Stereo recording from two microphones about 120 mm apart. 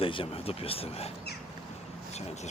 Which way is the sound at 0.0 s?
50° left (ahead or behind).